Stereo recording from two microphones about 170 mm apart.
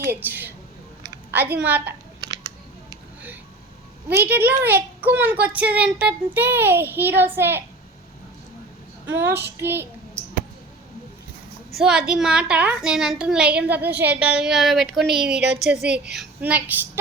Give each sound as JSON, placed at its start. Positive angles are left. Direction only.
{"t": 0.1, "sound": "speech", "side_deg": -10}
{"t": 1.6, "sound": "speech", "side_deg": -10}
{"t": 4.1, "sound": "speech", "side_deg": -10}
{"t": 9.0, "sound": "speech", "side_deg": -15}
{"t": 11.7, "sound": "a woman's voice", "side_deg": 0}
{"t": 15.8, "sound": "a woman's voice", "side_deg": -75}
{"t": 16.1, "sound": "a woman's voice", "side_deg": -10}